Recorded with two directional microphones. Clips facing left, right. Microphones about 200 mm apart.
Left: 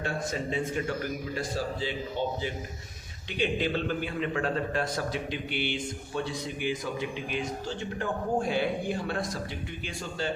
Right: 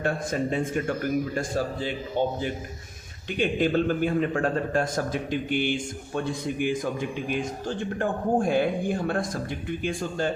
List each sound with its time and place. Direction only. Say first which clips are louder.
0.0 s a man's voice: right 5 dB; 55° right (ahead or behind)